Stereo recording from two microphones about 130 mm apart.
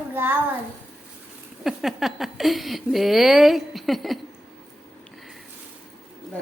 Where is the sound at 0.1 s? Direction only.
15° right (ahead or behind).